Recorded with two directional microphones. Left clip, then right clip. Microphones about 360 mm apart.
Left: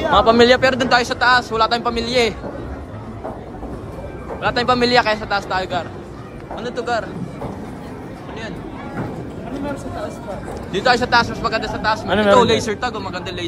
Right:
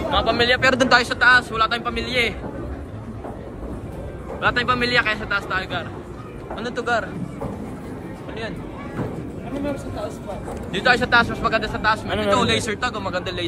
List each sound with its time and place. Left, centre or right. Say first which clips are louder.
0.1 s speech: left 7 dB; centre
0.7 s a man's voice: left 1 dB; centre
4.4 s a man's voice: left 3 dB; centre
10.7 s a man's voice: left 2 dB; centre
12.1 s a man's voice: left 6 dB; left
12.4 s a man's voice: left 6 dB; centre